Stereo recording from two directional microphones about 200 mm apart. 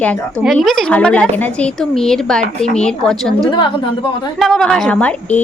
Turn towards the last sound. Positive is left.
turn(degrees=5)  # may be behind; listen again after turning